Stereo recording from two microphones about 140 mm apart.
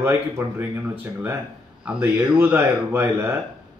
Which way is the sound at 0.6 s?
15° right (ahead or behind).